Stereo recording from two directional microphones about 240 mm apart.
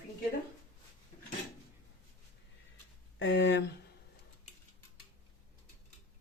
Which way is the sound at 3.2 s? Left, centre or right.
Left.